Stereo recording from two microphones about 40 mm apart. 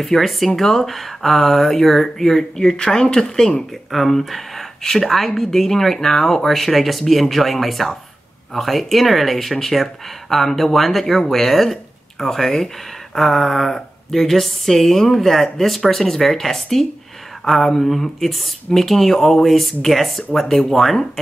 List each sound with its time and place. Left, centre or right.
0.0 s speech: centre
3.9 s speech: centre